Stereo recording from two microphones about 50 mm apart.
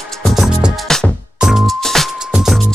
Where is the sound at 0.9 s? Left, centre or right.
Centre.